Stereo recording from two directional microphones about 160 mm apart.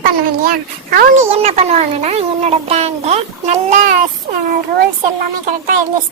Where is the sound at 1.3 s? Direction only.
40° right (ahead or behind).